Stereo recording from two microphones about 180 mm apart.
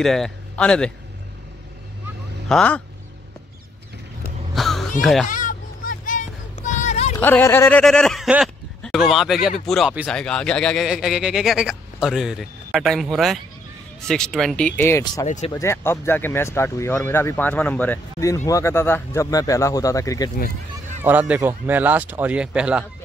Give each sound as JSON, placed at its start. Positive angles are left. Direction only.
{"t": 0.0, "sound": "a man's voice", "side_deg": 0}
{"t": 2.4, "sound": "speech", "side_deg": 5}
{"t": 4.6, "sound": "a sound", "side_deg": 0}
{"t": 5.0, "sound": "a man's voice", "side_deg": 0}
{"t": 5.3, "sound": "vehicle", "side_deg": 45}
{"t": 7.2, "sound": "a man's voice", "side_deg": 10}
{"t": 14.8, "sound": "speech", "side_deg": 15}
{"t": 15.2, "sound": "speech", "side_deg": 40}
{"t": 15.5, "sound": "speech", "side_deg": 15}
{"t": 21.0, "sound": "speech", "side_deg": -10}